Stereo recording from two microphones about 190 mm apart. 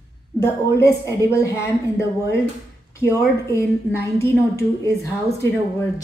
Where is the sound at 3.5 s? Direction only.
15° left (ahead or behind).